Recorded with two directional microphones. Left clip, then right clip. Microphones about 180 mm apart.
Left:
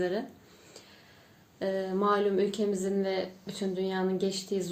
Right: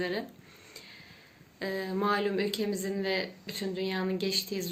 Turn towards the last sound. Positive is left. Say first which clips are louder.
# even
turn(degrees=45)  # may be behind; listen again after turning